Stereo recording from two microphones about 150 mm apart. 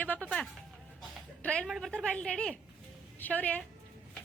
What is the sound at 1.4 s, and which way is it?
A woman's voice, 5° left (ahead or behind).